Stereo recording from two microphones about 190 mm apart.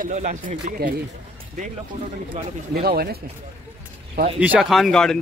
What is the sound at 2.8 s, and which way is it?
Speech, 55° right (ahead or behind).